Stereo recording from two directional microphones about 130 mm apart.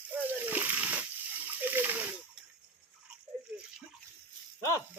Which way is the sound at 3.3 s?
10° left (ahead or behind).